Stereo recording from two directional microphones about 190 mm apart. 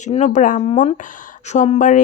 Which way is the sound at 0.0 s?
40° left (ahead or behind).